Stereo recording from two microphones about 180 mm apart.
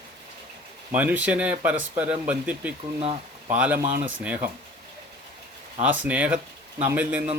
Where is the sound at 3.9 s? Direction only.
90° right.